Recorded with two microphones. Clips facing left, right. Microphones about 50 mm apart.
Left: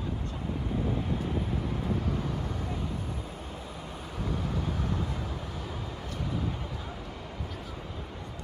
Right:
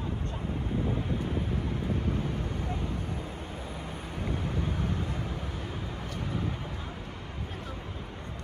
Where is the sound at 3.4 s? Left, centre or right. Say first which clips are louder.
Right 2 dB; right.